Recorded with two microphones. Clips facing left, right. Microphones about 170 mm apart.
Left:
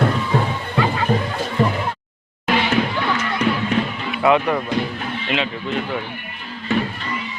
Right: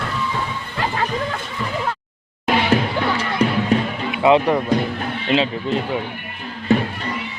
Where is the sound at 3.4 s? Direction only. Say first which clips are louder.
Right 2 dB; 35° right (ahead or behind).